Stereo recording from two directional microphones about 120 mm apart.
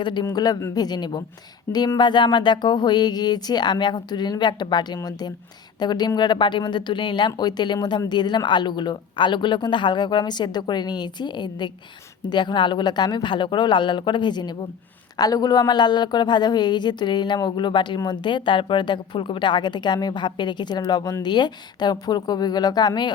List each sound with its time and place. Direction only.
0.0 s a woman's voice: 40° left (ahead or behind)